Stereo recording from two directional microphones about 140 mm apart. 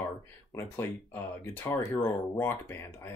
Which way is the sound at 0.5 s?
15° left (ahead or behind).